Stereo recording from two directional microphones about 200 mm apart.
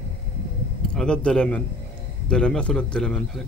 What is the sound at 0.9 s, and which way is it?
A man's voice, 5° left (ahead or behind).